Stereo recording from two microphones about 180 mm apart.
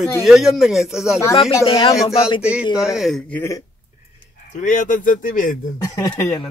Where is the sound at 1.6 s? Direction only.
30° left (ahead or behind).